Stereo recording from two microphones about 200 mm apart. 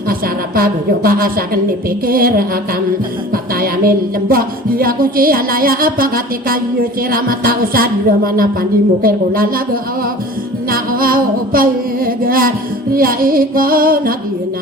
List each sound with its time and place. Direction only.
0.1 s music: 45° right (ahead or behind)
3.3 s music: 45° right (ahead or behind)
10.7 s music: 45° right (ahead or behind)